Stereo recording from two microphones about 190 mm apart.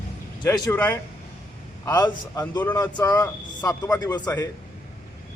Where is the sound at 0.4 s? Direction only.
20° left (ahead or behind).